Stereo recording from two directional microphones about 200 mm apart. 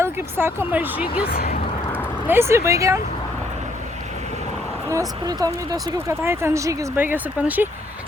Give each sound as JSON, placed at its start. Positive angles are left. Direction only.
{"t": 0.0, "sound": "speech", "side_deg": -10}
{"t": 1.3, "sound": "speech", "side_deg": 45}
{"t": 2.2, "sound": "speech", "side_deg": -10}
{"t": 4.9, "sound": "speech", "side_deg": -15}